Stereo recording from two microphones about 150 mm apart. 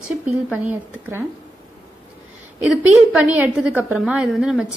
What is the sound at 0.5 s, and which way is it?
Speech, 10° right (ahead or behind).